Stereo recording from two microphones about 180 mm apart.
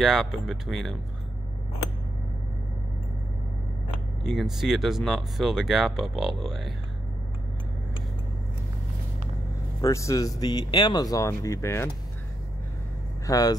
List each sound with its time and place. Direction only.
0.0 s speech: centre (ahead or behind)
4.2 s speech: centre (ahead or behind)
9.8 s speech: 15° left (ahead or behind)
13.3 s speech: 20° left (ahead or behind)